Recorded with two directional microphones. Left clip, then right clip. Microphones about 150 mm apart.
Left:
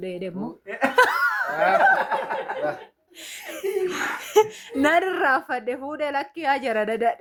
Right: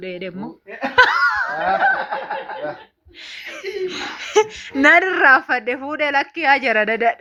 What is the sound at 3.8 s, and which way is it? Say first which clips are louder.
A woman's voice: even; 15° right (ahead or behind).